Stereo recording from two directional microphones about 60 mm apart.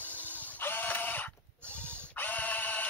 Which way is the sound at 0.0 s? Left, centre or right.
Left.